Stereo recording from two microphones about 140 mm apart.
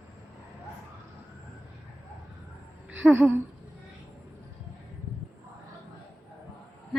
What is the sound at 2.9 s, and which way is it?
Speech, 10° right (ahead or behind).